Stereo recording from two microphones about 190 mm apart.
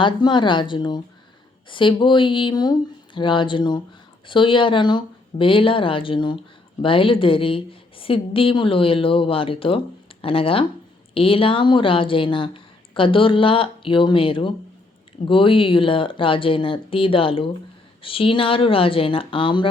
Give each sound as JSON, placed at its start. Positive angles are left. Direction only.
{"t": 0.0, "sound": "a woman's voice", "side_deg": 25}